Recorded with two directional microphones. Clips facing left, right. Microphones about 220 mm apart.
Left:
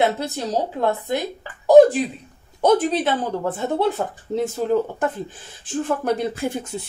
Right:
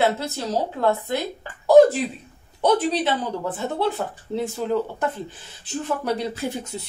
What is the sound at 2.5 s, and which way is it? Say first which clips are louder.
Speech: left 3 dB; 45° left (ahead or behind).